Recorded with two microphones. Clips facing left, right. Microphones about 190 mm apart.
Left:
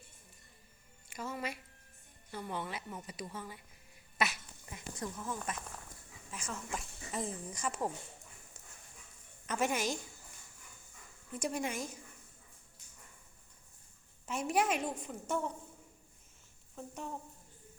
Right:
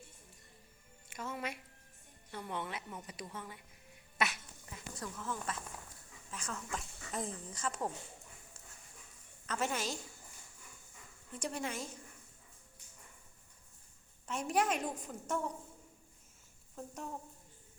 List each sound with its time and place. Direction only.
1.1 s a woman's voice: centre (ahead or behind)
4.7 s speech: 20° left (ahead or behind)
9.5 s speech: 15° left (ahead or behind)
11.3 s speech: 10° left (ahead or behind)
14.3 s a woman's voice: 5° left (ahead or behind)
16.7 s a sound: centre (ahead or behind)